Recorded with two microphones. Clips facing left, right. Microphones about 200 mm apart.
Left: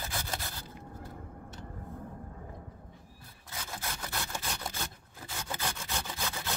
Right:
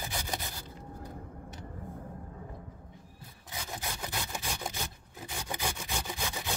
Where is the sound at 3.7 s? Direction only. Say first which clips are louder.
Right 1 dB; 15° right (ahead or behind).